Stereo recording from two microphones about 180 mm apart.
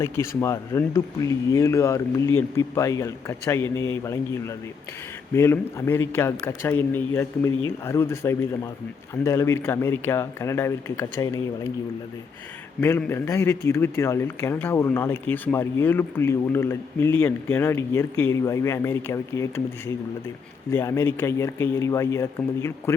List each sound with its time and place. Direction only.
0.0 s speech: 15° left (ahead or behind)
12.8 s speech: 15° left (ahead or behind)
20.7 s speech: 15° left (ahead or behind)